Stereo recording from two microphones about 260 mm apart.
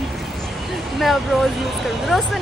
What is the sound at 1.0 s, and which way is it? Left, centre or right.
Speech, centre.